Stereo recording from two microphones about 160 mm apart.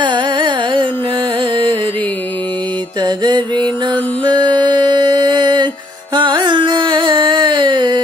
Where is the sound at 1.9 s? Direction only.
10° left (ahead or behind).